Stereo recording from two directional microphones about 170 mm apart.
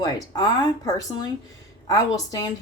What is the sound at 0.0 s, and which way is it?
Speech, 25° left (ahead or behind).